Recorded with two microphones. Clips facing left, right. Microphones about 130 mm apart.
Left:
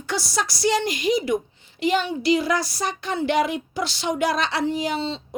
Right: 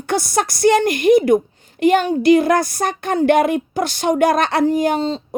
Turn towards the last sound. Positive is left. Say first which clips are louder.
# right 8 dB
turn(degrees=-45)  # may be behind; listen again after turning